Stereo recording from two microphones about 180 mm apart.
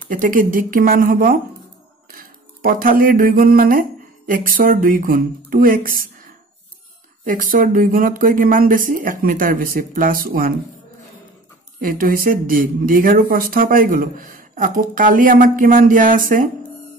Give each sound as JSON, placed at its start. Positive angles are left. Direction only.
{"t": 0.1, "sound": "speech", "side_deg": -50}
{"t": 7.2, "sound": "speech", "side_deg": -50}
{"t": 11.8, "sound": "speech", "side_deg": -50}